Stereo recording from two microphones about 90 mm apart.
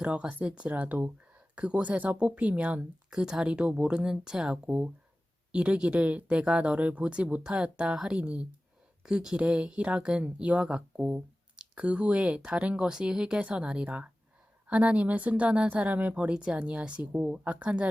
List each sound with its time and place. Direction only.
0.0 s speech: 10° right (ahead or behind)